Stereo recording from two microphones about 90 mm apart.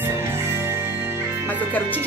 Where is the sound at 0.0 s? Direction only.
25° right (ahead or behind).